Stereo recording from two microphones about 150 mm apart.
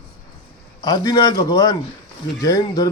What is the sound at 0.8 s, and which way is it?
A man's voice, 25° left (ahead or behind).